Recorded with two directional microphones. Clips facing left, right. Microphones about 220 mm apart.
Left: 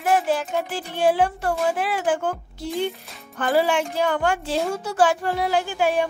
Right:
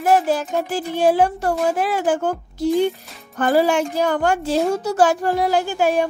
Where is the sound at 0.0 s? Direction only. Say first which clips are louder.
Right 4 dB; 40° right (ahead or behind).